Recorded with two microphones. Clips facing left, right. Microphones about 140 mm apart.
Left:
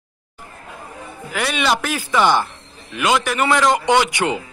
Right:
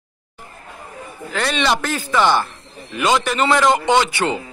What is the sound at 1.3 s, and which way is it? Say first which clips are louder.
A man's voice: right 1 dB; 10° left (ahead or behind).